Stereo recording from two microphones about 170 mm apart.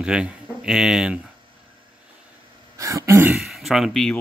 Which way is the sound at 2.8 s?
20° right (ahead or behind).